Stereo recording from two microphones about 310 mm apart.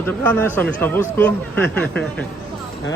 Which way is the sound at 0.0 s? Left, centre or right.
Centre.